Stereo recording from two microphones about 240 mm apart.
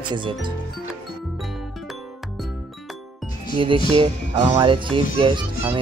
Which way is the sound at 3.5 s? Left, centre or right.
Right.